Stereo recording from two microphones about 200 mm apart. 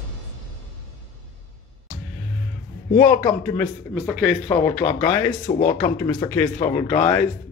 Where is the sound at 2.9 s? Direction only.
10° left (ahead or behind).